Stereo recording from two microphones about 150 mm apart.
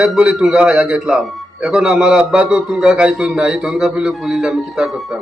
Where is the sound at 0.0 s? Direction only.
5° right (ahead or behind).